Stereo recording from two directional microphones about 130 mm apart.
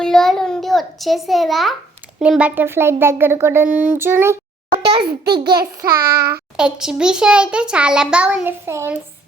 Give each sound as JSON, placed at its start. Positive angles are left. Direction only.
{"t": 0.0, "sound": "a sound", "side_deg": 5}
{"t": 2.1, "sound": "a child's voice", "side_deg": -5}
{"t": 4.9, "sound": "a child's voice", "side_deg": -35}
{"t": 6.6, "sound": "a child's voice", "side_deg": -5}